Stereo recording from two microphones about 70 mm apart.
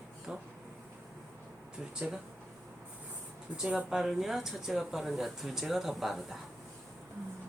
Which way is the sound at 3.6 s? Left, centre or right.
Centre.